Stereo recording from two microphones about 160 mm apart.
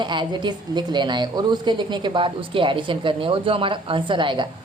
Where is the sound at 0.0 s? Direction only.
30° right (ahead or behind).